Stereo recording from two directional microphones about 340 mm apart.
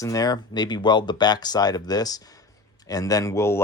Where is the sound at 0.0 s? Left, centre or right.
Centre.